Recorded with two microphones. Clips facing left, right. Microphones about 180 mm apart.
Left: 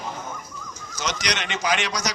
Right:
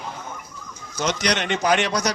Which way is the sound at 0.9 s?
55° right (ahead or behind).